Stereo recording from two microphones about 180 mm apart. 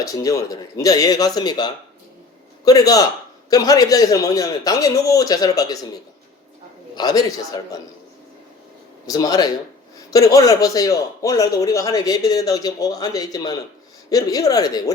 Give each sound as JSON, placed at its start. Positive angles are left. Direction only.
{"t": 0.0, "sound": "a man's voice", "side_deg": 20}
{"t": 6.9, "sound": "a man's voice", "side_deg": 20}
{"t": 9.0, "sound": "a man's voice", "side_deg": 20}